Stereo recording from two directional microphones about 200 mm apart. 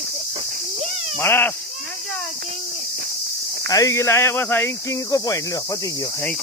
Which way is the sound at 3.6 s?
15° left (ahead or behind).